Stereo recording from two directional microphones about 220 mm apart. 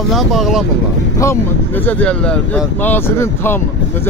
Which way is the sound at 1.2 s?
10° left (ahead or behind).